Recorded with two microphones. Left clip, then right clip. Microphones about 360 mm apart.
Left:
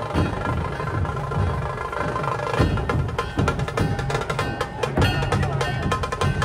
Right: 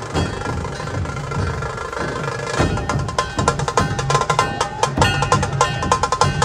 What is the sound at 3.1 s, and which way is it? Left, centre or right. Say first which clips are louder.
Music: right 6 dB; centre.